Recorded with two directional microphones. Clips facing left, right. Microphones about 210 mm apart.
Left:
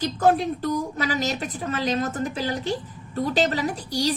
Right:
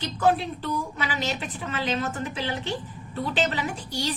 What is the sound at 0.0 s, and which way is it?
A woman's voice, 45° left (ahead or behind).